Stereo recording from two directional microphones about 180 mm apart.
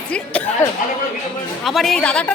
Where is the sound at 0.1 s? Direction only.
5° left (ahead or behind).